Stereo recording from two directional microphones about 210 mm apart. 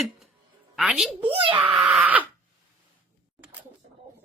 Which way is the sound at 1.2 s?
25° right (ahead or behind).